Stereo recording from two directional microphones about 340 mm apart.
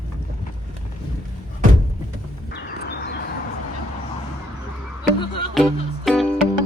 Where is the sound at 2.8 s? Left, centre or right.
Left.